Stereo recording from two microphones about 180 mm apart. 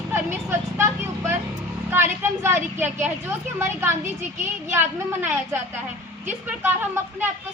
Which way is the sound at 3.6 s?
15° right (ahead or behind).